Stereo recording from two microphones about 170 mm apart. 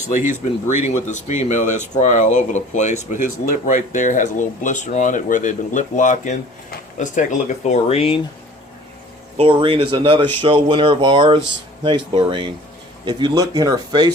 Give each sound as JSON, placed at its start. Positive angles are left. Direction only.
{"t": 0.7, "sound": "speech", "side_deg": 45}
{"t": 9.4, "sound": "speech", "side_deg": -30}